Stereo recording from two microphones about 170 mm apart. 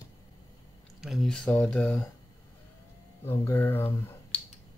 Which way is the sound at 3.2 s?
15° left (ahead or behind).